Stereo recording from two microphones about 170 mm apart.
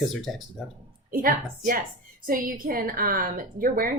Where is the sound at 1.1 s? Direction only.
60° right (ahead or behind).